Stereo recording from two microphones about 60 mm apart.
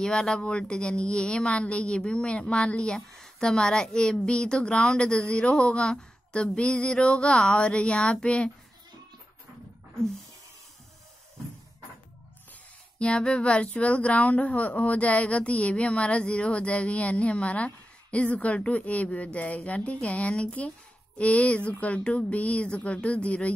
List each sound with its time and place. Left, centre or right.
0.0 s a woman's voice: centre
13.0 s a woman's voice: centre